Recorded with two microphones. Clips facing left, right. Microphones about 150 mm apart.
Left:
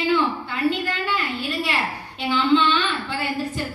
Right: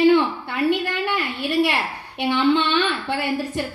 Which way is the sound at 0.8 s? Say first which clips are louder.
Right 2 dB; 60° right (ahead or behind).